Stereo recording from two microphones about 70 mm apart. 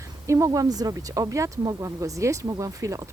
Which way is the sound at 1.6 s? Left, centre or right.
Right.